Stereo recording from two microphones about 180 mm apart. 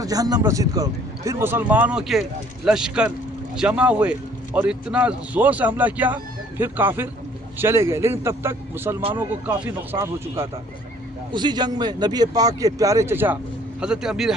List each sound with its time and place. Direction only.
0.0 s a man's voice: 20° right (ahead or behind); by 14.3 s 5° right (ahead or behind)